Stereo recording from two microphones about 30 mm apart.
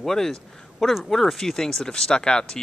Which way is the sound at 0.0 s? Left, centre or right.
Centre.